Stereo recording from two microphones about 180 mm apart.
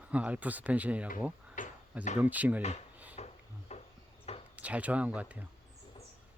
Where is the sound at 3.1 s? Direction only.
40° left (ahead or behind).